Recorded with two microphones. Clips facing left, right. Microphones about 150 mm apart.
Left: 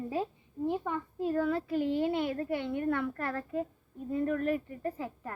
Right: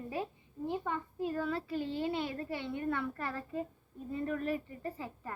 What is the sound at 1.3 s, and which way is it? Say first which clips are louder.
A woman's voice: left 7 dB; centre (ahead or behind).